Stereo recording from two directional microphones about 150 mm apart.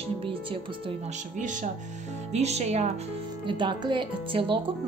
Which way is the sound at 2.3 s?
50° right (ahead or behind).